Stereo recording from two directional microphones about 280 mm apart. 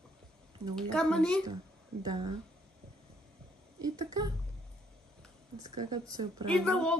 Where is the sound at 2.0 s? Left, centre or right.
Centre.